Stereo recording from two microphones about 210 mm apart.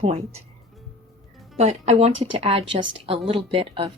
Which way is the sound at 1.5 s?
30° right (ahead or behind).